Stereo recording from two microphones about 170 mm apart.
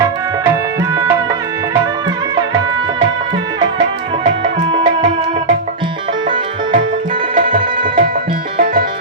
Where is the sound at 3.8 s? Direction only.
45° right (ahead or behind).